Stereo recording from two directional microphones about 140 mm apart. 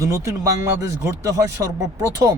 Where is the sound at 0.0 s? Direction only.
25° right (ahead or behind).